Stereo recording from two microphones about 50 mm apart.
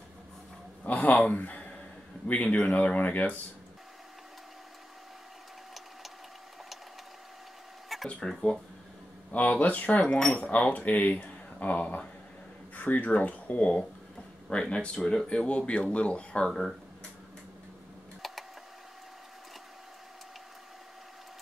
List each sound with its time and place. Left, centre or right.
0.8 s a sound: left
2.2 s speech: left
8.2 s speech: centre
9.3 s speech: left
10.0 s speech: centre
10.4 s speech: left
18.2 s a sound: centre